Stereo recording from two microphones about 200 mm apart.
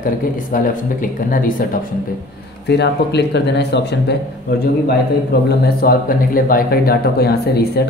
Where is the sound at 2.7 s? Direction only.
60° left (ahead or behind).